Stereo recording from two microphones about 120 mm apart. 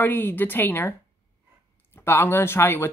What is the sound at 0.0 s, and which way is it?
Speech, 15° left (ahead or behind).